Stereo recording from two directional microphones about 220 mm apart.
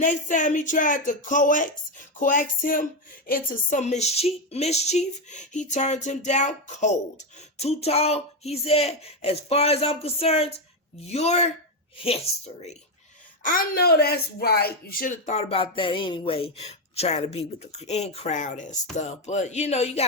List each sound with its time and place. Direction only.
0.0 s speech: 35° left (ahead or behind)
13.4 s speech: 40° left (ahead or behind)